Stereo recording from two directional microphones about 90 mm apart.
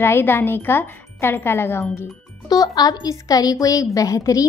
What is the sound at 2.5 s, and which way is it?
A woman's voice, 45° left (ahead or behind).